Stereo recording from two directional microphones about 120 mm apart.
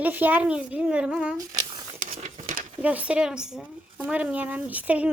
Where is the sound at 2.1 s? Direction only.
70° right (ahead or behind); by 2.7 s 90° right.